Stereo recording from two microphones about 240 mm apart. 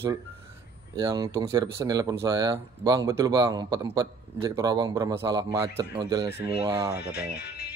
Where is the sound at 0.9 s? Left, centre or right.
Centre.